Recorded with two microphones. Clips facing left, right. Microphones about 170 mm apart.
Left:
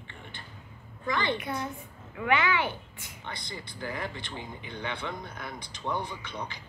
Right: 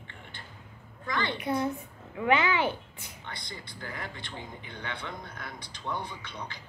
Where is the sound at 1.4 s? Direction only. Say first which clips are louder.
Right 5 dB; 30° right (ahead or behind).